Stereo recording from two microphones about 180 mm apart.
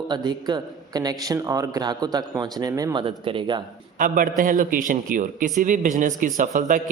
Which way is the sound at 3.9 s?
50° right (ahead or behind).